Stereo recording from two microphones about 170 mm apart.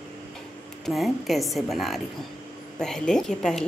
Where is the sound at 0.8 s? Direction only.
Centre (ahead or behind).